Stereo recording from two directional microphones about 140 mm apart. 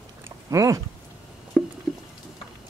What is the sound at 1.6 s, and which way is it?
Patter, 10° left (ahead or behind).